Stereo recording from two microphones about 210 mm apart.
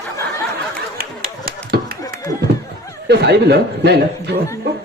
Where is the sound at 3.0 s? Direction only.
50° right (ahead or behind).